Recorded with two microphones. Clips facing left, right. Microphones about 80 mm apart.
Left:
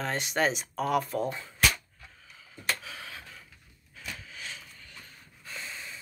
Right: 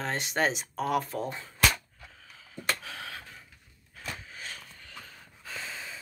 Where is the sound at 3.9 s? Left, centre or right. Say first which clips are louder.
Right 2 dB; right.